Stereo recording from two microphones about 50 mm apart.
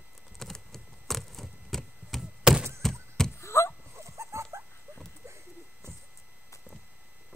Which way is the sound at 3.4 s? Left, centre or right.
Left.